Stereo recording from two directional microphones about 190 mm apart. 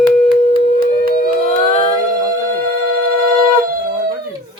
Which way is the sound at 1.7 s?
30° left (ahead or behind).